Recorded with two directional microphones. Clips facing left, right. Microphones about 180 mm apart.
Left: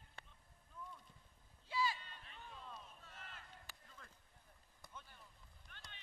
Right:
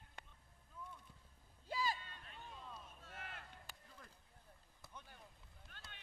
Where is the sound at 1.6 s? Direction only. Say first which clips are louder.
Left 1 dB; 45° right (ahead or behind).